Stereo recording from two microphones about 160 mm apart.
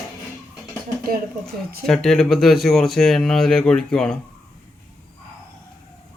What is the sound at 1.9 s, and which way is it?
Speech, 5° left (ahead or behind).